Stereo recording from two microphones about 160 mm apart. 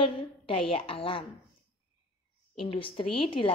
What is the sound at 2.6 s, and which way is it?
Speech, 35° left (ahead or behind).